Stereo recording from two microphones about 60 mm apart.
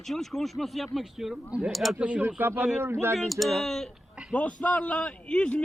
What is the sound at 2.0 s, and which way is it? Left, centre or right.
Speech, right.